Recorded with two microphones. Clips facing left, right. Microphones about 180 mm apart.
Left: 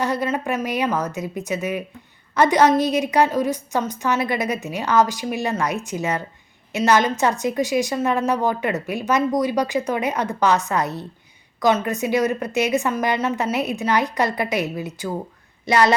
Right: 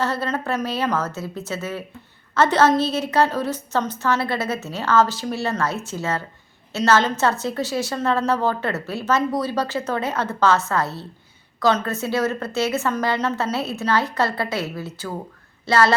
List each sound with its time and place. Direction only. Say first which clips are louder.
0.0 s a woman's voice: left 2 dB; 15° left (ahead or behind)